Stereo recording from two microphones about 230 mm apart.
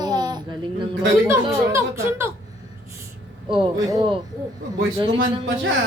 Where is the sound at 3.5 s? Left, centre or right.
Centre.